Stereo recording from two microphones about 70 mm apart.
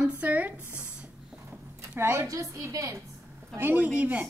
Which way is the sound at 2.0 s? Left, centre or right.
Right.